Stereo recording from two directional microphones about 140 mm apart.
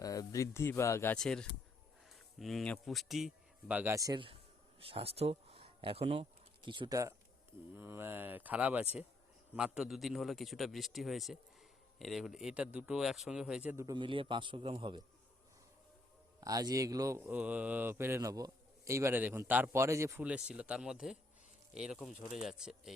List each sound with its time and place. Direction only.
0.0 s speech: 25° left (ahead or behind)
1.1 s a man's voice: 5° left (ahead or behind)
3.9 s speech: 25° right (ahead or behind)
4.8 s speech: 40° right (ahead or behind); by 7.1 s 25° right (ahead or behind)
7.8 s a man's voice: 15° right (ahead or behind)
13.8 s a man's voice: 35° right (ahead or behind)
16.4 s speech: 25° right (ahead or behind)
20.2 s a man's voice: 10° right (ahead or behind)